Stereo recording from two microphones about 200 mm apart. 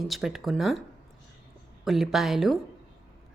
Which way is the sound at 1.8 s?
Centre (ahead or behind).